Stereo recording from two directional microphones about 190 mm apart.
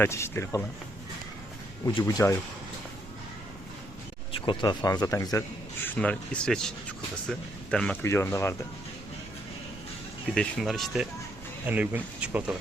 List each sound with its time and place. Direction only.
0.0 s a man's voice: 15° left (ahead or behind)
1.8 s speech: 20° left (ahead or behind)
4.3 s a man's voice: 25° left (ahead or behind)
10.3 s speech: centre (ahead or behind)